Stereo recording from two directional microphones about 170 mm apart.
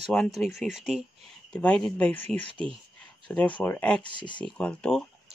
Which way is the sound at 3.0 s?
5° left (ahead or behind).